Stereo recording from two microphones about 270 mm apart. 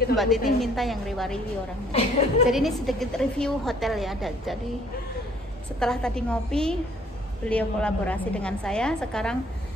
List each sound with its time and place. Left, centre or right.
0.1 s a woman's voice: centre
1.9 s a woman's voice: left
2.5 s a woman's voice: centre
5.8 s a woman's voice: centre